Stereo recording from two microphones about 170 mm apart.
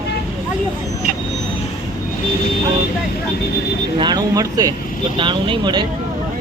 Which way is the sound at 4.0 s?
25° right (ahead or behind).